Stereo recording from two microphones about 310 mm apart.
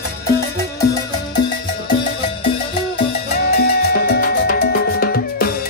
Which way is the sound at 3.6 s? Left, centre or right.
Left.